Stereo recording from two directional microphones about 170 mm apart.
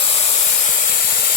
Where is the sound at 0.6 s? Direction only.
50° left (ahead or behind).